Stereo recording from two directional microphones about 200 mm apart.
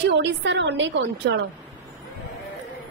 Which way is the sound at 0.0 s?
60° right (ahead or behind).